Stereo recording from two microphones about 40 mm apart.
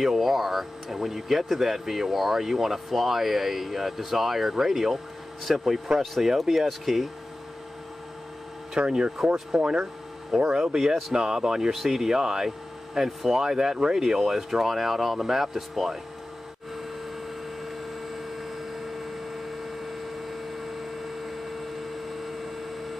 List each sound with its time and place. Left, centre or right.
0.0 s speech: centre
8.7 s speech: centre
17.6 s a sound: centre